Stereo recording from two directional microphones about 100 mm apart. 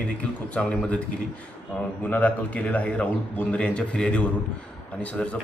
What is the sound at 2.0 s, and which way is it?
Speech, 15° left (ahead or behind).